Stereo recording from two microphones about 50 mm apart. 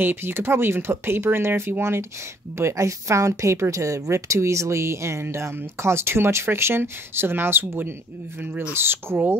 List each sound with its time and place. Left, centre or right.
0.0 s speech: right
2.5 s speech: right
5.2 s speech: right
8.4 s speech: right
8.7 s speech: right